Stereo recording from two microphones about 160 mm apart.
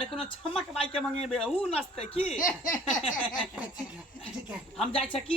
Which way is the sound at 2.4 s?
55° left (ahead or behind).